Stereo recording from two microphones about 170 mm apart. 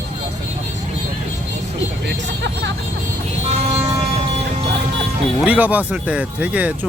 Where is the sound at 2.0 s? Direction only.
90° right.